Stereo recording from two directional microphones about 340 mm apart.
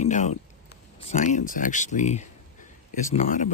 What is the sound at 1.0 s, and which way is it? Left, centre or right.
Speech, left.